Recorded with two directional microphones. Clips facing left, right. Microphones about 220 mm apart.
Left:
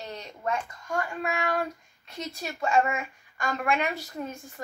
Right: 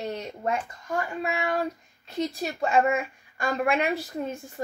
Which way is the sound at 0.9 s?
20° right (ahead or behind).